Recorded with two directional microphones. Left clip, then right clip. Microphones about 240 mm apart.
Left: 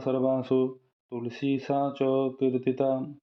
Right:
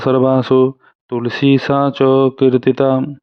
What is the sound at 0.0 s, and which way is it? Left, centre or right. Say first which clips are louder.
Speech: right 13 dB; right.